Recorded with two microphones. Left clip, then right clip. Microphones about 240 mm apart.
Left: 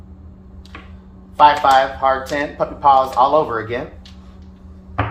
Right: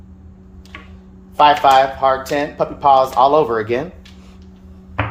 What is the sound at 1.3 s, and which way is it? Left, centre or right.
Speech, right.